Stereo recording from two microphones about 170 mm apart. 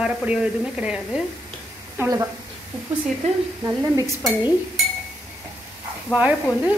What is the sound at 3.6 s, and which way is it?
Speech, 20° right (ahead or behind).